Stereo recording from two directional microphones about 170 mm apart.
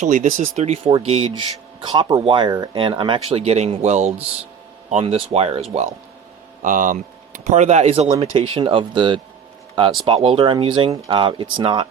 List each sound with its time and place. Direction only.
0.0 s speech: 50° right (ahead or behind)
6.6 s speech: 50° right (ahead or behind); by 11.9 s 30° right (ahead or behind)